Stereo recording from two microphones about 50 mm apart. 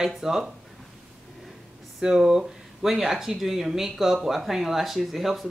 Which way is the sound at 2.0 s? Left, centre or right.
Centre.